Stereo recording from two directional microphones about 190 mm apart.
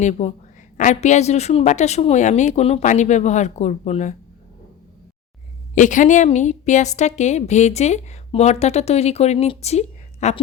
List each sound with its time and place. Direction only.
0.0 s a woman's voice: 35° left (ahead or behind)
5.7 s a woman's voice: 40° left (ahead or behind)